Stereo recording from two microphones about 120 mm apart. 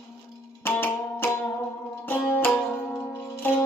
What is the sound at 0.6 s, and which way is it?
Music, 15° left (ahead or behind).